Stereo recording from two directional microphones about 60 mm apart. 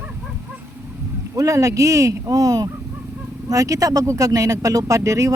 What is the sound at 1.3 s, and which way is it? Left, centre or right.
Speech, right.